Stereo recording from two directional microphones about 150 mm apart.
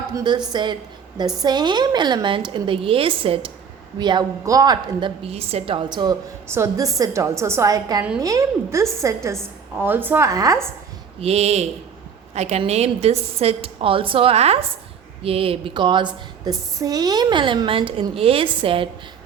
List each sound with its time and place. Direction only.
0.2 s a woman's voice: 30° right (ahead or behind)
11.2 s a woman's voice: 45° right (ahead or behind)